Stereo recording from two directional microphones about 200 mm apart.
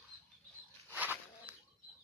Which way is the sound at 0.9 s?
10° right (ahead or behind).